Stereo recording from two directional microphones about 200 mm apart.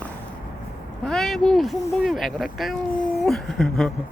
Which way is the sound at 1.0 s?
Centre (ahead or behind).